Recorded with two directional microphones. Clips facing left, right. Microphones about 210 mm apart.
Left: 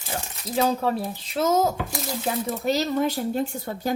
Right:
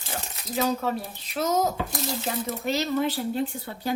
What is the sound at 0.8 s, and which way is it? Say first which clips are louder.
Speech: left 4 dB; 30° left (ahead or behind).